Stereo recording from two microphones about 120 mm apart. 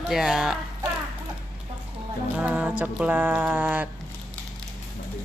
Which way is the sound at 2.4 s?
10° right (ahead or behind).